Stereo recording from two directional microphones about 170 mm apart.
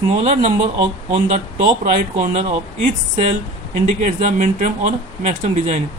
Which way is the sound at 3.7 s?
50° right (ahead or behind).